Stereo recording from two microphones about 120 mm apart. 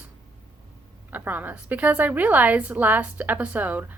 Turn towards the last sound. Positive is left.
turn(degrees=-15)  # may be behind; listen again after turning